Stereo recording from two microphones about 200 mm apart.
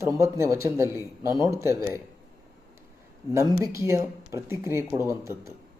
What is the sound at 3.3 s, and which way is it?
Speech, 15° right (ahead or behind).